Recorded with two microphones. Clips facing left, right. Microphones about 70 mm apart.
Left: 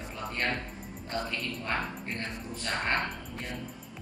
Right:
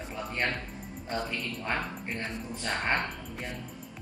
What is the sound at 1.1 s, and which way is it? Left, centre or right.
Speech, centre.